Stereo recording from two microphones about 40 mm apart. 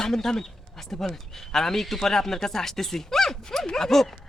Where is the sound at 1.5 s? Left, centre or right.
Centre.